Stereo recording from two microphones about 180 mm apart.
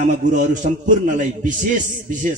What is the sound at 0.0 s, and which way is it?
A man's voice, 45° right (ahead or behind).